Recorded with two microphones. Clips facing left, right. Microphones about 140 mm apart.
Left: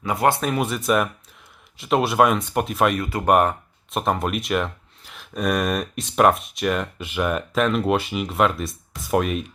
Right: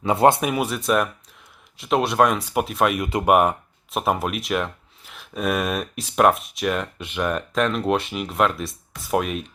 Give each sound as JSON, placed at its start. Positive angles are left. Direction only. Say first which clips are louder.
{"t": 0.0, "sound": "speech", "louder": "right 4 dB", "side_deg": -25}
{"t": 0.4, "sound": "speech", "louder": "even", "side_deg": -5}
{"t": 3.0, "sound": "speech", "louder": "right 2 dB", "side_deg": -20}
{"t": 3.2, "sound": "speech", "louder": "even", "side_deg": -5}